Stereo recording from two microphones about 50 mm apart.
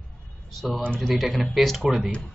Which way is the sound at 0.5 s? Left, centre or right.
Centre.